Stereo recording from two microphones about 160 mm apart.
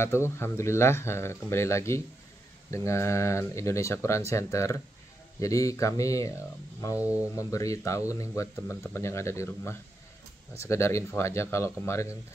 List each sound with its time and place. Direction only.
0.0 s speech: 15° left (ahead or behind)
7.0 s speech: 10° right (ahead or behind)
7.3 s speech: 20° left (ahead or behind)